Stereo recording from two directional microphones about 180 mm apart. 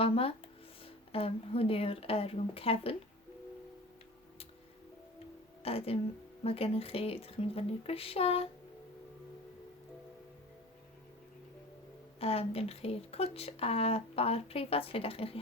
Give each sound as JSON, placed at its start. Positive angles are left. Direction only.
{"t": 0.0, "sound": "speech", "side_deg": 30}
{"t": 5.6, "sound": "speech", "side_deg": 35}
{"t": 12.2, "sound": "speech", "side_deg": 35}